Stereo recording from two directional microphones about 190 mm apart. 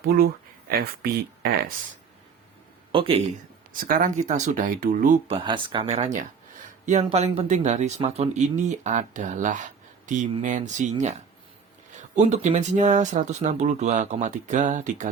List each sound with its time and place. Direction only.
0.0 s speech: 55° right (ahead or behind)
2.9 s a man's voice: 25° right (ahead or behind)
3.7 s speech: 45° right (ahead or behind)
5.3 s speech: 25° right (ahead or behind)
11.9 s speech: 35° right (ahead or behind)